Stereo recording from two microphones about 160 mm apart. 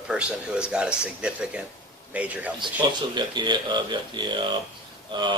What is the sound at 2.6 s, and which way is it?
A man's voice, 30° right (ahead or behind).